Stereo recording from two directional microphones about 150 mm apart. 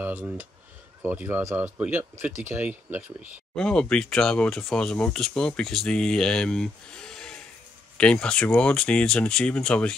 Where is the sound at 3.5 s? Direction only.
5° left (ahead or behind).